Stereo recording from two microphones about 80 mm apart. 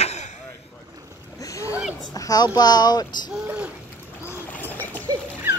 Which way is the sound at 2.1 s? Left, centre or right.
Left.